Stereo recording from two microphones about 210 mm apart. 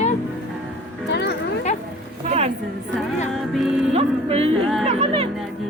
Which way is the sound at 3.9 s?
30° right (ahead or behind).